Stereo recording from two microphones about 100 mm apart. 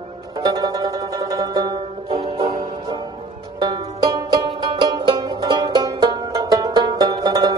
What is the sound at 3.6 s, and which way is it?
Music, 40° right (ahead or behind).